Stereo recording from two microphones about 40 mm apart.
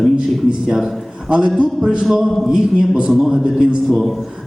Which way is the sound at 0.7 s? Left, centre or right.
Centre.